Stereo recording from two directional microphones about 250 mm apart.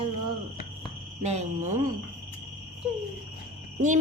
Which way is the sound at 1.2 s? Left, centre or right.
Right.